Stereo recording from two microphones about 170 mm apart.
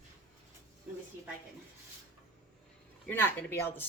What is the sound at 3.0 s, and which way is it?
Speech, 10° left (ahead or behind).